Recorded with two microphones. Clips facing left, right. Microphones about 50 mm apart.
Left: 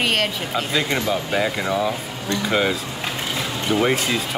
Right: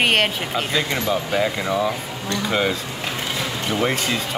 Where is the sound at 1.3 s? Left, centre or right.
Centre.